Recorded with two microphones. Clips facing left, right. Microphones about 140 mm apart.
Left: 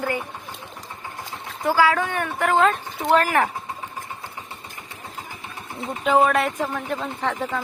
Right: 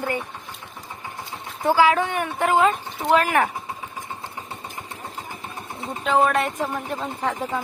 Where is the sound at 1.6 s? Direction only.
20° right (ahead or behind).